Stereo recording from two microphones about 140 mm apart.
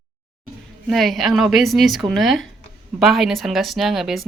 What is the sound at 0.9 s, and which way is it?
Speech, centre (ahead or behind).